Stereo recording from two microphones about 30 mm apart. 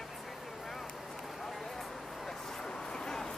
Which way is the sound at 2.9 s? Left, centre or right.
Left.